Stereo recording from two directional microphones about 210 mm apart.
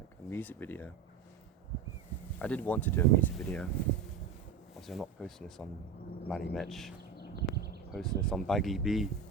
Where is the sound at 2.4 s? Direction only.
5° left (ahead or behind).